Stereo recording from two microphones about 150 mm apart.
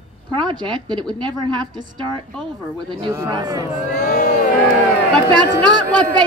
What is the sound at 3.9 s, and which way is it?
Crowd, 55° left (ahead or behind).